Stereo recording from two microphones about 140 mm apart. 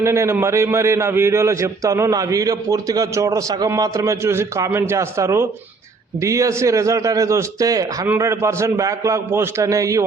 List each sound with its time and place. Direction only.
0.0 s a man's voice: 20° right (ahead or behind)